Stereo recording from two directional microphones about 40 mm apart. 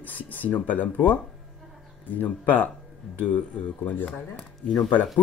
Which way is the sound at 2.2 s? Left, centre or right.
Left.